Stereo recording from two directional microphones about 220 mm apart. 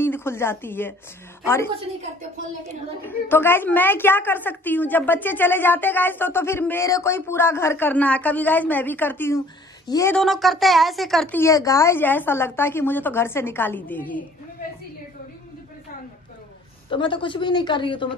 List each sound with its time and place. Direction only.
0.0 s a woman's voice: 10° left (ahead or behind)
3.0 s a woman's voice: 10° left (ahead or behind)
10.1 s a woman's voice: centre (ahead or behind)
16.9 s speech: 20° left (ahead or behind)